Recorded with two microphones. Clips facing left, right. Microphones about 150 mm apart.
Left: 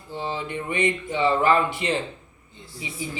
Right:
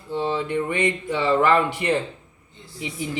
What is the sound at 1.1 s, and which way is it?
Speech, 70° right (ahead or behind).